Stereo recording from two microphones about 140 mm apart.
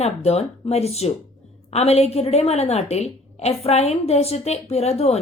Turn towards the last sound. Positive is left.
turn(degrees=50)  # may be behind; listen again after turning